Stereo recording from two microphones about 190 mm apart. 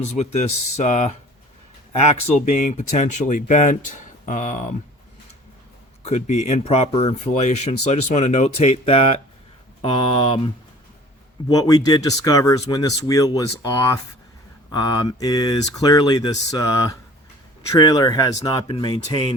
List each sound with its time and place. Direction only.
0.0 s speech: 35° left (ahead or behind)
2.5 s speech: 40° left (ahead or behind)
6.1 s speech: 35° left (ahead or behind)